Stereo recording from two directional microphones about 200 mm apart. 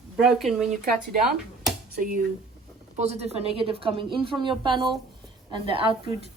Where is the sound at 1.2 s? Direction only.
Centre (ahead or behind).